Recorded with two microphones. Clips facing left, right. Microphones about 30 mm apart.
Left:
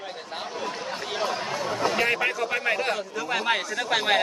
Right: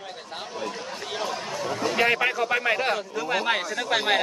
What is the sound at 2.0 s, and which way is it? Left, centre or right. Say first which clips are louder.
A man's voice: right 6 dB; centre.